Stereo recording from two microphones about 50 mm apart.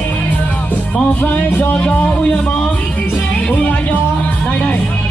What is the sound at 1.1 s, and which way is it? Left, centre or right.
Music, left.